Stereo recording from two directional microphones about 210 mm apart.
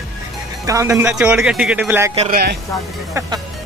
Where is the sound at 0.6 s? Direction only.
15° right (ahead or behind).